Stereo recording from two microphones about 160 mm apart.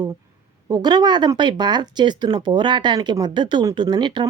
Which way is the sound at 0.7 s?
25° right (ahead or behind).